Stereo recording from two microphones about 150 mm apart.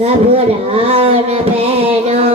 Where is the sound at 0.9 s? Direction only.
40° right (ahead or behind).